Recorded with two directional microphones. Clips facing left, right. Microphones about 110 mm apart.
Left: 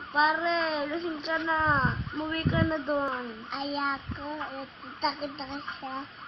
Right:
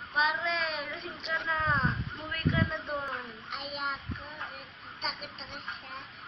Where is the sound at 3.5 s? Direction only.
35° left (ahead or behind).